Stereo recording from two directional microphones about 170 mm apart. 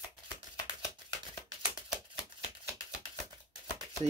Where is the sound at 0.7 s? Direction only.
20° left (ahead or behind).